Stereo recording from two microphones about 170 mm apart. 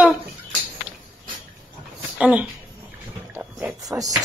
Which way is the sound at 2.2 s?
10° right (ahead or behind).